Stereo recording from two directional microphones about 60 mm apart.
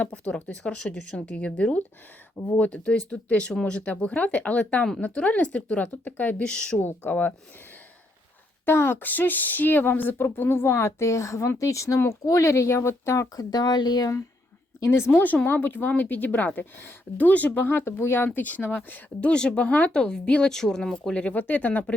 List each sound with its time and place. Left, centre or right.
0.0 s a woman's voice: left
6.4 s speech: centre
6.7 s a woman's voice: left
8.6 s a woman's voice: left
14.8 s a woman's voice: left
17.7 s a woman's voice: left
19.3 s speech: centre